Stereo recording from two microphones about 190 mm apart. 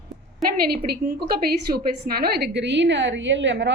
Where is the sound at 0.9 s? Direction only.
55° right (ahead or behind).